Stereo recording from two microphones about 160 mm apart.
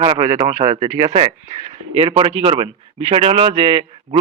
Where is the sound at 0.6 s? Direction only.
30° right (ahead or behind).